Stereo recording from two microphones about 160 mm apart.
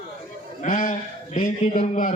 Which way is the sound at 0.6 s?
50° left (ahead or behind).